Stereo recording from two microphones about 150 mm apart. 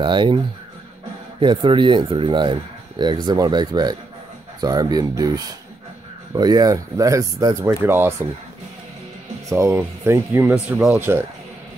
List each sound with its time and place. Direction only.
0.0 s speech: 30° right (ahead or behind)
1.4 s speech: 30° right (ahead or behind); by 8.3 s 15° right (ahead or behind)
9.5 s speech: 20° right (ahead or behind)